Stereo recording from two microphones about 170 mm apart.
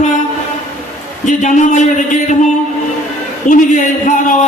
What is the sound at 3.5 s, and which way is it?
Speech, 45° left (ahead or behind).